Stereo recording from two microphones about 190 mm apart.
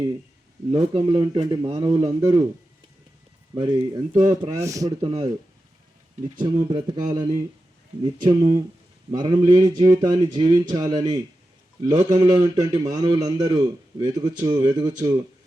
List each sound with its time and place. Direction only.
0.7 s a man's voice: 25° right (ahead or behind)
3.5 s a man's voice: 25° right (ahead or behind)
4.1 s speech: 40° right (ahead or behind)
4.4 s a man's voice: 15° right (ahead or behind)
6.4 s a man's voice: 25° right (ahead or behind)